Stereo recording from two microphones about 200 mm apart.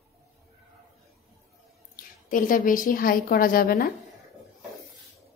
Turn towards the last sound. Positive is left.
turn(degrees=50)  # may be behind; listen again after turning